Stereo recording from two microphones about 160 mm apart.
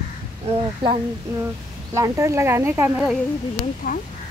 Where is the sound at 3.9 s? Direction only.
60° left (ahead or behind).